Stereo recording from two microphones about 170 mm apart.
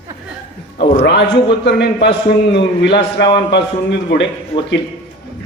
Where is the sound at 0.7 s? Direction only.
90° left.